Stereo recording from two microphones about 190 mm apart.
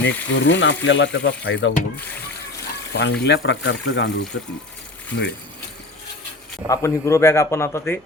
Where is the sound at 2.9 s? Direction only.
65° left (ahead or behind).